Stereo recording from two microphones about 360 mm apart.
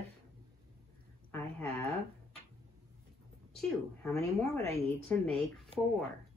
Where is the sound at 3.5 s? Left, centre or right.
Centre.